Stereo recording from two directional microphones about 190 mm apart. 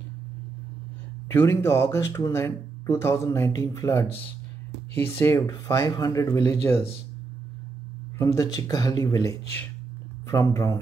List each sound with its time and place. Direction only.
1.3 s speech: 15° left (ahead or behind)
8.2 s speech: 15° left (ahead or behind)